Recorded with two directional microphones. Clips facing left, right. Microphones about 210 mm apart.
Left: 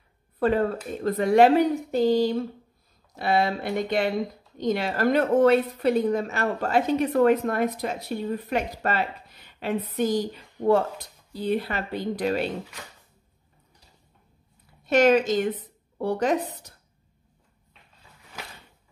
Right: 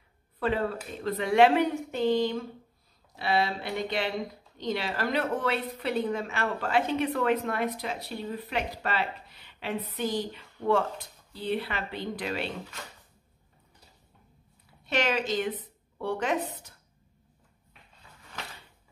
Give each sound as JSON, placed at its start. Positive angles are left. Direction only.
{"t": 0.4, "sound": "a woman's voice", "side_deg": 45}
{"t": 3.2, "sound": "a woman's voice", "side_deg": 45}
{"t": 14.9, "sound": "a woman's voice", "side_deg": 45}